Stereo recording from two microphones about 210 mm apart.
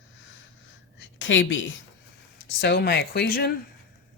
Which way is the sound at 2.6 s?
50° left (ahead or behind).